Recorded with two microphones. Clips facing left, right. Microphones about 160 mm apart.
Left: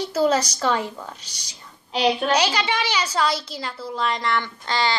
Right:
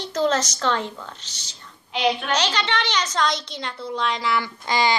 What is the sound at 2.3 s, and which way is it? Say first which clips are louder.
A woman's voice: left 2 dB; 10° left (ahead or behind).